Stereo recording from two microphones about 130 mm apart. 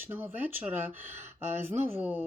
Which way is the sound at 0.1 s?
15° right (ahead or behind).